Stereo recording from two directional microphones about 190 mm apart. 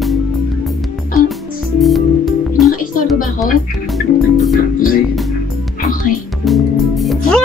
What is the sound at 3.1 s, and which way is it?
Music, 45° left (ahead or behind).